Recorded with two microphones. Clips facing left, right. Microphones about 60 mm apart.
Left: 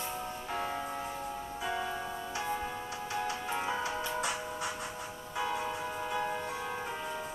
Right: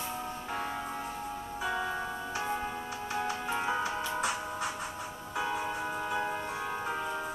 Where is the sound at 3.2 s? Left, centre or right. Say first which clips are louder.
Right 3 dB; centre.